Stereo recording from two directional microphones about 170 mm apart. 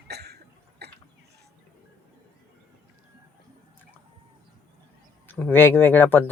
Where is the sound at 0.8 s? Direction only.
75° right (ahead or behind).